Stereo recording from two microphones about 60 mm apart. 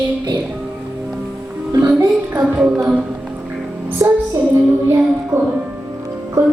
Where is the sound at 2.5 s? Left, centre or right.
Right.